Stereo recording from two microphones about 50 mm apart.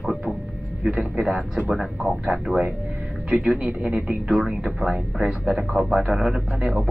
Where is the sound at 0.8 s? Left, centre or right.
Right.